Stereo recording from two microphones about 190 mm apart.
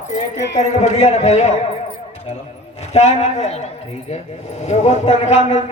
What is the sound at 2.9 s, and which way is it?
A man's voice, 35° left (ahead or behind).